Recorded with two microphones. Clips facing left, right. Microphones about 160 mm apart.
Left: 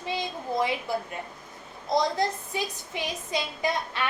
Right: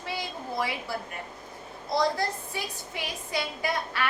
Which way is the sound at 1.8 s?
20° left (ahead or behind).